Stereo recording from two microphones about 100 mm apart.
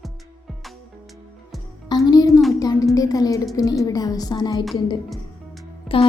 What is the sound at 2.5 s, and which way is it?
A woman's voice, 35° left (ahead or behind).